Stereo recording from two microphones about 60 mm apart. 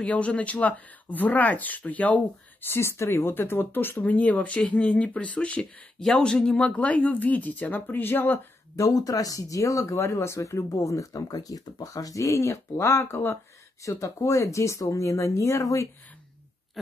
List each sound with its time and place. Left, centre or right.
0.0 s speech: centre
2.6 s speech: left
4.0 s speech: left
5.6 s speech: centre; by 8.4 s left
8.7 s speech: left
13.8 s speech: left